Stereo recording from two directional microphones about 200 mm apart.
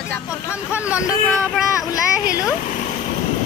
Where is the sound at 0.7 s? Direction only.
5° right (ahead or behind).